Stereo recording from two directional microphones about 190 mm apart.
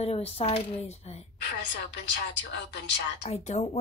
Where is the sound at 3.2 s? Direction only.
35° left (ahead or behind).